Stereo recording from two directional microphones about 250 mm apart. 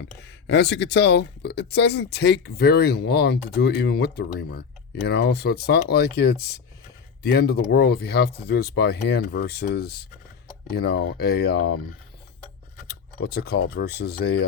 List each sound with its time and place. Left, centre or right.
0.2 s speech: left
12.9 s speech: left